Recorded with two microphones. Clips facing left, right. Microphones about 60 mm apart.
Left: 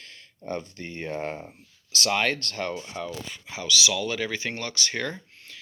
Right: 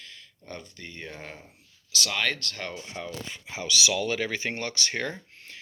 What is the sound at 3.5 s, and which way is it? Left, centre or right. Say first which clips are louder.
Speech: left 1 dB; right.